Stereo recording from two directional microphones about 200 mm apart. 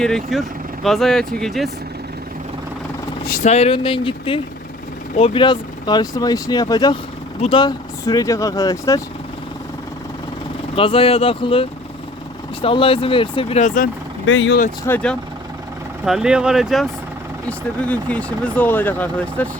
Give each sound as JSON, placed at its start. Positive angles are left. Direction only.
{"t": 0.0, "sound": "speech", "side_deg": 0}
{"t": 3.2, "sound": "speech", "side_deg": 40}
{"t": 10.8, "sound": "speech", "side_deg": 25}
{"t": 14.3, "sound": "speech", "side_deg": 70}
{"t": 14.8, "sound": "speech", "side_deg": 5}